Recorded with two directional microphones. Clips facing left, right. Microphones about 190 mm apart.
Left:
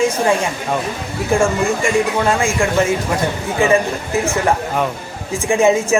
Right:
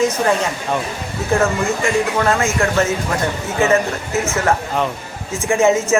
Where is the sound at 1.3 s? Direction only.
10° left (ahead or behind).